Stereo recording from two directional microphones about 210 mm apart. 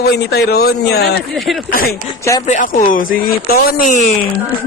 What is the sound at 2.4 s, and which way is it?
Music, 35° left (ahead or behind).